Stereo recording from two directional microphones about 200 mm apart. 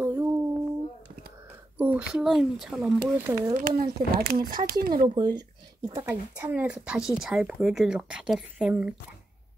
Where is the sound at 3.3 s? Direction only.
15° right (ahead or behind).